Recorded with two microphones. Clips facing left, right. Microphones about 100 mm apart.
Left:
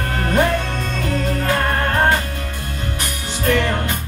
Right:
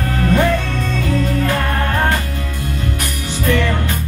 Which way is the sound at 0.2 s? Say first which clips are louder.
Right 2 dB; 35° left (ahead or behind).